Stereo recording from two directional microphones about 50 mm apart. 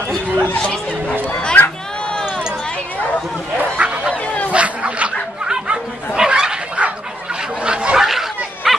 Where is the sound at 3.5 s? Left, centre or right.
Right.